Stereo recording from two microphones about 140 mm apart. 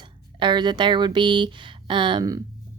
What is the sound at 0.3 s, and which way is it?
A woman's voice, 35° right (ahead or behind).